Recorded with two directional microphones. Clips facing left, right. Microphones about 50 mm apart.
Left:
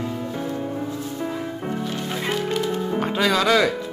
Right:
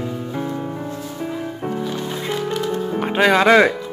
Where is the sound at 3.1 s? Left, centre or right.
Right.